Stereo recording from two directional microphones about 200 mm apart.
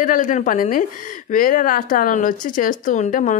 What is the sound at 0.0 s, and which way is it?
A woman's voice, 40° left (ahead or behind).